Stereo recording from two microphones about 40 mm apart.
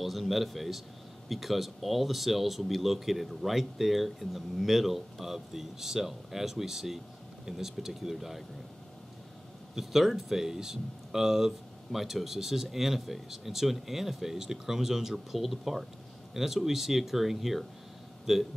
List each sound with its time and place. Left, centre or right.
0.0 s speech: centre
9.8 s speech: centre